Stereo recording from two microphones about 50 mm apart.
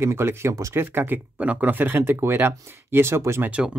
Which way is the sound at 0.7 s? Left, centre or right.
Right.